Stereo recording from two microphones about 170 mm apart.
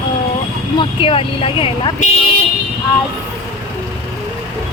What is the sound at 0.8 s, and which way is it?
Speech, 30° left (ahead or behind).